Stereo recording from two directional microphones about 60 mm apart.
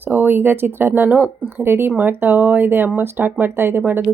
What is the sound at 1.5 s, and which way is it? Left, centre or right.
Speech, right.